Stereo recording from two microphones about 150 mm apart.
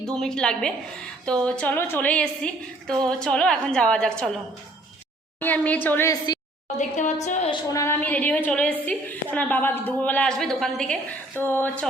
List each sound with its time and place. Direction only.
0.0 s a woman's voice: 5° left (ahead or behind)
5.4 s a woman's voice: 10° left (ahead or behind)
6.7 s a woman's voice: 55° left (ahead or behind)
7.5 s a woman's voice: 20° left (ahead or behind); by 10.9 s 5° left (ahead or behind)
11.3 s a woman's voice: 15° left (ahead or behind)